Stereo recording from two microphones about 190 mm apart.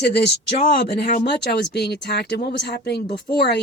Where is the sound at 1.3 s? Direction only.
60° left (ahead or behind).